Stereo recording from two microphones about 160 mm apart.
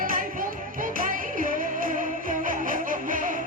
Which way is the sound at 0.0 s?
60° right (ahead or behind).